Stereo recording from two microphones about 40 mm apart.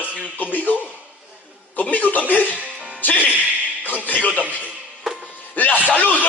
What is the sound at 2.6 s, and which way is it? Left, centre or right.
Music, right.